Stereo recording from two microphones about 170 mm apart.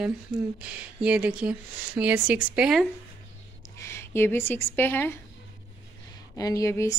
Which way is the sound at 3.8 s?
15° left (ahead or behind).